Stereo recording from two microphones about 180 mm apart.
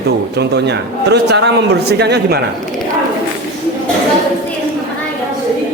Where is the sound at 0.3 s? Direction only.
70° right (ahead or behind).